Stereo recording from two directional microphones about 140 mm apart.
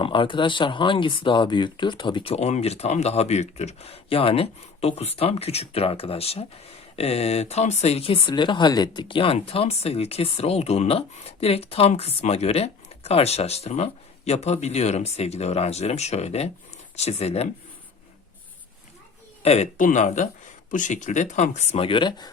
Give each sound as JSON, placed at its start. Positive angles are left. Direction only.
{"t": 0.0, "sound": "speech", "side_deg": 35}
{"t": 19.4, "sound": "a man's voice", "side_deg": 50}
{"t": 19.7, "sound": "speech", "side_deg": 65}
{"t": 21.8, "sound": "speech", "side_deg": 35}